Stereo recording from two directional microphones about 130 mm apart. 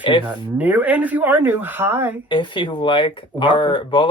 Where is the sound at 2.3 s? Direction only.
40° left (ahead or behind).